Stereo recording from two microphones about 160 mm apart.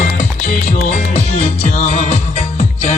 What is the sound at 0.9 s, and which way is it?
Music, 50° left (ahead or behind).